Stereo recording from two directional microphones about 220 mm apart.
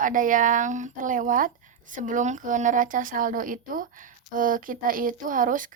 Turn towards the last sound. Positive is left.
turn(degrees=-35)  # may be behind; listen again after turning